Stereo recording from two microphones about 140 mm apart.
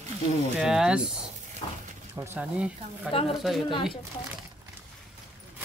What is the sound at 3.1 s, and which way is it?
Speech, 40° left (ahead or behind).